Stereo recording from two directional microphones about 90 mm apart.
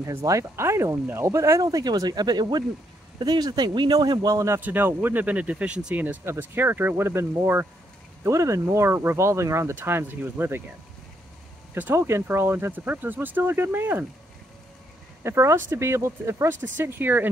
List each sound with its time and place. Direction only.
0.0 s speech: 35° right (ahead or behind)
4.6 s speech: 20° right (ahead or behind)
11.7 s speech: 25° right (ahead or behind)
15.2 s speech: 30° right (ahead or behind)